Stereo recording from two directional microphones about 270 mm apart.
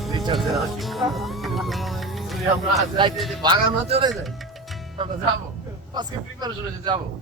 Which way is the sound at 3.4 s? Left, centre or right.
Centre.